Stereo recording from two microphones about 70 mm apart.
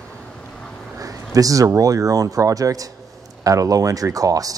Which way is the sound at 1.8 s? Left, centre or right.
Right.